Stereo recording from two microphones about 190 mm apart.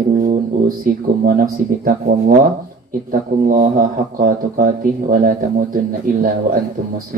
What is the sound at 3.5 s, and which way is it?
Speech, 45° right (ahead or behind).